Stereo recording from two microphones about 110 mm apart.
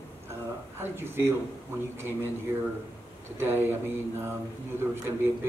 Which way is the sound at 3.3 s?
20° right (ahead or behind).